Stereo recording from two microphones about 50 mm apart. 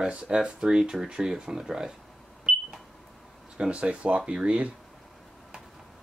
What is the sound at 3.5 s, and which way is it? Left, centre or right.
Speech, right.